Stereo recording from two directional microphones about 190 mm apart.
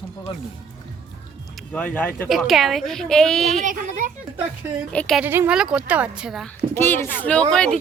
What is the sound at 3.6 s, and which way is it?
Speech, 40° right (ahead or behind).